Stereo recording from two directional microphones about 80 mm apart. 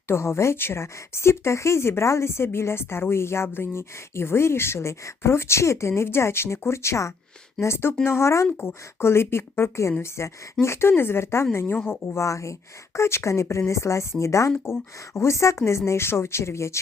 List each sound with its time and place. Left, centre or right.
0.1 s speech: left